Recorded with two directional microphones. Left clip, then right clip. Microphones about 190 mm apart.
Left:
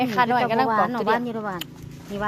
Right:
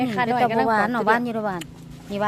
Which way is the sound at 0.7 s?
30° right (ahead or behind).